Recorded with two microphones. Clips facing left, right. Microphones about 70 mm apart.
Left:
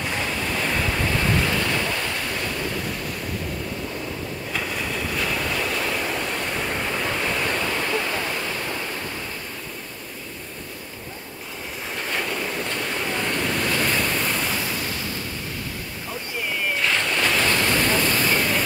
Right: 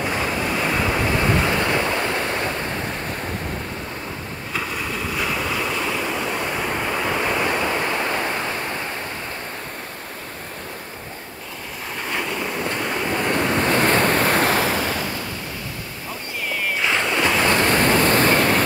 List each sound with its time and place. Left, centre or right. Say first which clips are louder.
0.0 s waves: right 4 dB; centre; by 2.5 s right
4.6 s waves: right 2 dB; centre; by 8.5 s right
12.1 s train: right 2 dB; centre
12.6 s waves: right 3 dB; centre
13.3 s waves: right 7 dB; right
16.8 s waves: right 3 dB; centre
17.5 s waves: right 4 dB; right
17.7 s waves: right 5 dB; right